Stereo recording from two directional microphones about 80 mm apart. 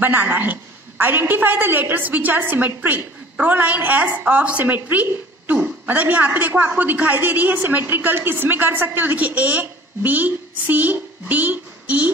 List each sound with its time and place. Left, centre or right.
0.0 s a man's voice: right